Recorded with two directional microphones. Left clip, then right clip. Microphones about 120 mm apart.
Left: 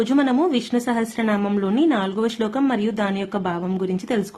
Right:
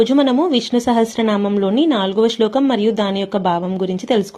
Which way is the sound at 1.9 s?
30° right (ahead or behind).